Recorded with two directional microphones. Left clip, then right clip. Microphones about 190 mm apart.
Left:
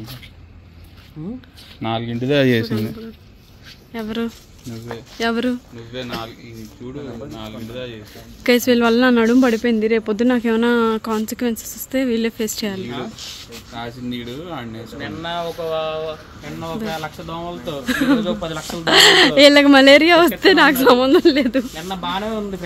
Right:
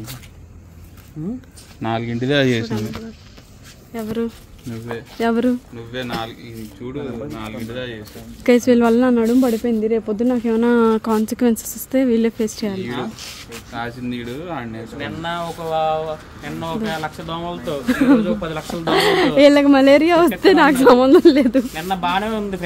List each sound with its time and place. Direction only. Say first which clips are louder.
1.8 s speech: right 1 dB; 20° left (ahead or behind)
2.2 s a man's voice: left 1 dB; 40° left (ahead or behind)
3.9 s speech: right 1 dB; 5° right (ahead or behind)
4.9 s speech: right 2 dB; 15° right (ahead or behind)
6.8 s speech: right 3 dB; 5° left (ahead or behind)
8.5 s speech: right 1 dB; 10° right (ahead or behind)
9.1 s speech: left 2 dB; 15° left (ahead or behind)
10.7 s speech: right 2 dB; 15° right (ahead or behind)
11.9 s speech: right 3 dB; 15° right (ahead or behind)
14.1 s speech: right 2 dB; 25° left (ahead or behind)
15.2 s speech: left 1 dB; 65° right (ahead or behind)
16.5 s speech: right 2 dB; 5° right (ahead or behind)
17.8 s speech: right 2 dB; 15° right (ahead or behind)